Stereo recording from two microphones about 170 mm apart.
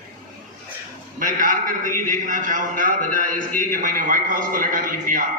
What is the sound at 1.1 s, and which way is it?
A man's voice, 50° right (ahead or behind).